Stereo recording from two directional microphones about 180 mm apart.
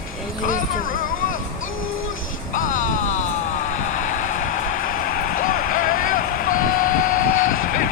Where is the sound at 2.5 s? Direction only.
45° left (ahead or behind).